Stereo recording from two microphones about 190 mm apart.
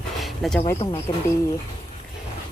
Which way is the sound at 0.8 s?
30° left (ahead or behind).